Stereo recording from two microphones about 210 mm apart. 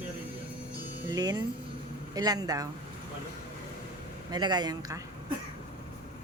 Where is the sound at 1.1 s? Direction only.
20° right (ahead or behind).